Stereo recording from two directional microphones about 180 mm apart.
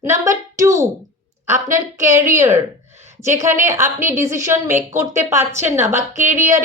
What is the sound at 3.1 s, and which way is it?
A woman's voice, 15° right (ahead or behind).